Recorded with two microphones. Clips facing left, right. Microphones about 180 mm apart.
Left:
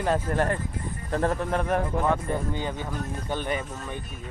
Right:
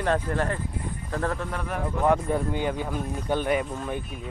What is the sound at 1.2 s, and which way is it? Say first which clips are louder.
Speech: left 3 dB; 20° left (ahead or behind).